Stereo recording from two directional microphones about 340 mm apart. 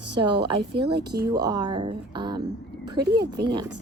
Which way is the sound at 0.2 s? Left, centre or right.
Centre.